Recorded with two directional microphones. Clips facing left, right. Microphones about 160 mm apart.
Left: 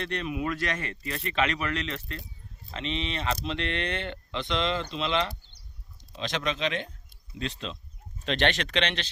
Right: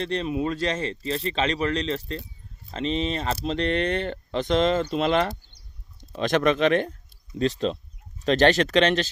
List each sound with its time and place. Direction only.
0.0 s a man's voice: 30° right (ahead or behind); by 6.9 s 50° right (ahead or behind)
8.2 s a man's voice: 40° right (ahead or behind)